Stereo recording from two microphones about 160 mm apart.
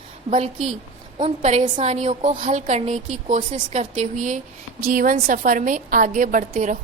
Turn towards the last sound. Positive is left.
turn(degrees=-50)  # may be behind; listen again after turning